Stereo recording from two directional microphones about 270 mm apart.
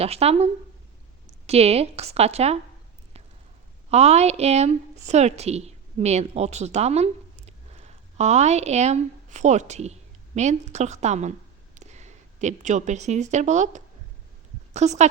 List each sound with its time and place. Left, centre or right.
0.0 s a woman's voice: right
3.8 s a woman's voice: right